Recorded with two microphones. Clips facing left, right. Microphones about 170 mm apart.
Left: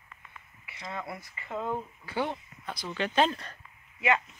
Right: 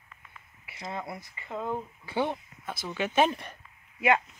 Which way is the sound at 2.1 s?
15° right (ahead or behind).